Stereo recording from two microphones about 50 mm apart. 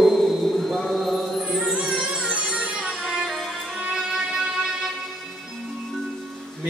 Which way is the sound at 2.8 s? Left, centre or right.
Centre.